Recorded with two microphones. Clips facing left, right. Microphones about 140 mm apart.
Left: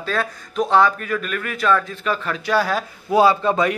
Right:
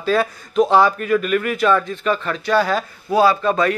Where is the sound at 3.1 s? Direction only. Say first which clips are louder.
Even; 20° left (ahead or behind).